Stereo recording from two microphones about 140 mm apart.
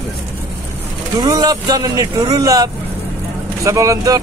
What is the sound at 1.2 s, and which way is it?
Speech, 30° right (ahead or behind).